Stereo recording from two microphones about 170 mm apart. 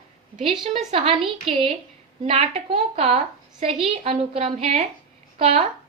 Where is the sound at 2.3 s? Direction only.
35° right (ahead or behind).